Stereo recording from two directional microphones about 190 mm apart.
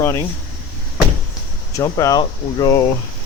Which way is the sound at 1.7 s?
15° left (ahead or behind).